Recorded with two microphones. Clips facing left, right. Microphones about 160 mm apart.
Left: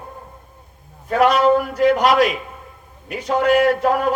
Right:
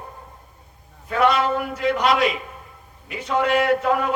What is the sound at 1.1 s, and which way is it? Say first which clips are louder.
A man's voice: left 5 dB; 45° left (ahead or behind).